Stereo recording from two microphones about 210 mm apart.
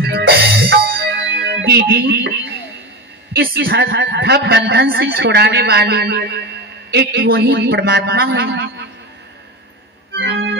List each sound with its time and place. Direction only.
0.7 s music: 50° right (ahead or behind)
3.3 s a man's voice: 50° right (ahead or behind)
10.1 s music: 55° right (ahead or behind)